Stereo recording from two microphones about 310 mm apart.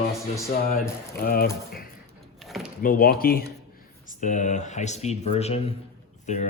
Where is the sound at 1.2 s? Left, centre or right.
Left.